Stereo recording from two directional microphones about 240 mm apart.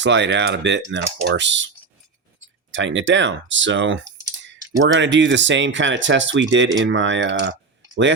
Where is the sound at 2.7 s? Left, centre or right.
Right.